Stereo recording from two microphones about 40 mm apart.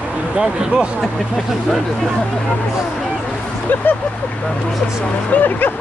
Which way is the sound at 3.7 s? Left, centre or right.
Left.